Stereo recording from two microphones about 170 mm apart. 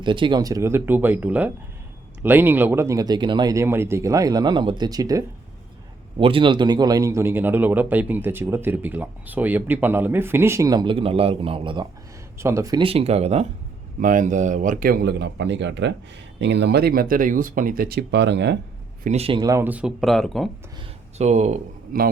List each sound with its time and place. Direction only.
0.0 s a man's voice: 30° right (ahead or behind)
6.1 s a man's voice: 30° right (ahead or behind)
12.4 s a man's voice: 15° right (ahead or behind)
12.8 s speech: 35° right (ahead or behind)
14.0 s speech: 50° right (ahead or behind); by 18.5 s 85° right
19.0 s speech: 35° right (ahead or behind)
19.4 s speech: 20° right (ahead or behind); by 20.5 s centre (ahead or behind)
21.2 s speech: 40° right (ahead or behind)
21.9 s speech: 55° right (ahead or behind)